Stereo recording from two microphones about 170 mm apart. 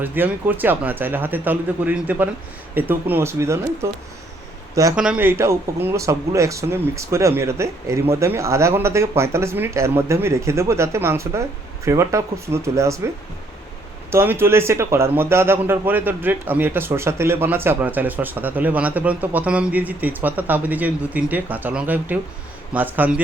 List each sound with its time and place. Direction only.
0.0 s a man's voice: 10° right (ahead or behind)
4.9 s a man's voice: 5° right (ahead or behind)
14.1 s a man's voice: 15° right (ahead or behind)